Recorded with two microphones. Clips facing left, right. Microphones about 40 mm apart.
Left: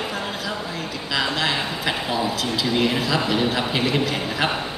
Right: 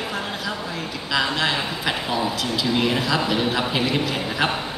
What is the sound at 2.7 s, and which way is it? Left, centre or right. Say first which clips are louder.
A man's voice: even; centre.